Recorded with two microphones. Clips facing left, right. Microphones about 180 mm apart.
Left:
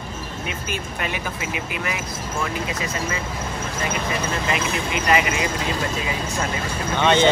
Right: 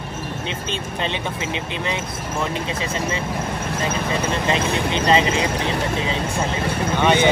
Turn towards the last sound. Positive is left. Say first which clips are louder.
# right 1 dB
turn(degrees=-15)  # may be behind; listen again after turning